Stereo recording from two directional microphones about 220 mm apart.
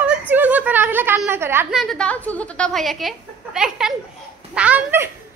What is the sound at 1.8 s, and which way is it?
A woman's voice, 5° left (ahead or behind).